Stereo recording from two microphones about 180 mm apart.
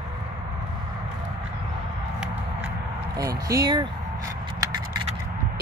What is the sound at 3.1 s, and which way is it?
Speech, 20° right (ahead or behind).